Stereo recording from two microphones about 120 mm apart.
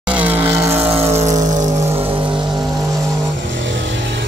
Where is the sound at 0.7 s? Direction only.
55° right (ahead or behind); by 1.7 s 90° right.